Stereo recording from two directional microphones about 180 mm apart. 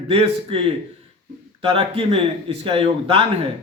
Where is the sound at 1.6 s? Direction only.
30° right (ahead or behind).